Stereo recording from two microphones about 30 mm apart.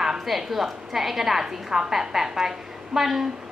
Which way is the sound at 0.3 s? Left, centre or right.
Centre.